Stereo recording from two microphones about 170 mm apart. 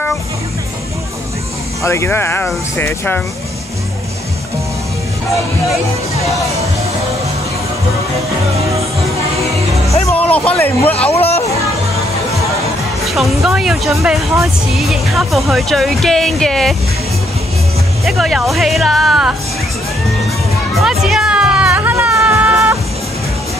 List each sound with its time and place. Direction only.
1.8 s speech: 15° left (ahead or behind)
10.0 s speech: 10° left (ahead or behind)
11.1 s speech: 40° left (ahead or behind)
13.0 s speech: centre (ahead or behind)
18.0 s speech: centre (ahead or behind)
20.8 s music: 5° right (ahead or behind)